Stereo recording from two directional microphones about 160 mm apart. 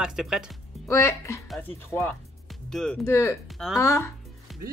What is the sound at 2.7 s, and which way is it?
Speech, 5° left (ahead or behind).